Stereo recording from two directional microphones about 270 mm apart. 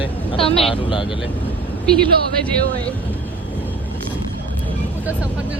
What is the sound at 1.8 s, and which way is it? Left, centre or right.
Speech, centre.